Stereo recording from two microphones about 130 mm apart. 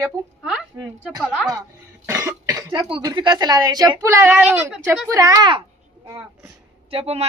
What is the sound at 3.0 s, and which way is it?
A woman's voice, 35° right (ahead or behind).